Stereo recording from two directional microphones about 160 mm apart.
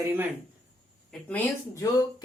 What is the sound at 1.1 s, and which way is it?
Speech, 10° left (ahead or behind).